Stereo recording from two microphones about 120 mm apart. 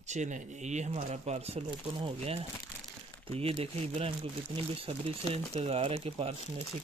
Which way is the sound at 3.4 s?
55° right (ahead or behind).